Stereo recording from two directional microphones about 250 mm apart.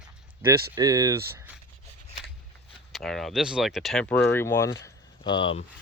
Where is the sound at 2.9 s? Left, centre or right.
Centre; by 5.7 s left.